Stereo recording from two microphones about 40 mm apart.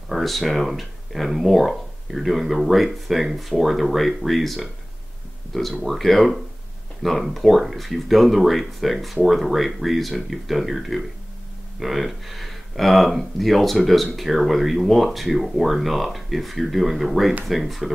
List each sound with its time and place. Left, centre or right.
0.1 s speech: centre